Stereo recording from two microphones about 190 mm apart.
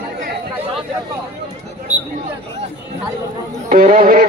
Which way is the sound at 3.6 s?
40° right (ahead or behind).